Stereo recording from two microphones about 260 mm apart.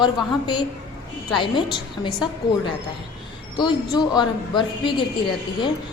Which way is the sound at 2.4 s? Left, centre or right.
Left.